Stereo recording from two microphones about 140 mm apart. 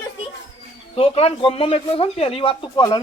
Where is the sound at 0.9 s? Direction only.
45° left (ahead or behind).